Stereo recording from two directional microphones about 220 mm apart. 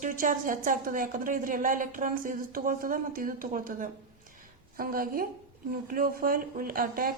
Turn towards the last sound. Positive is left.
turn(degrees=-40)  # may be behind; listen again after turning